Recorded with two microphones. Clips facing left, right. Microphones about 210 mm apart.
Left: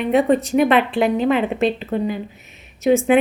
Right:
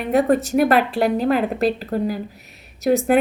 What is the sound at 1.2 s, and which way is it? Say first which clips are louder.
Speech: left 1 dB; 40° right (ahead or behind).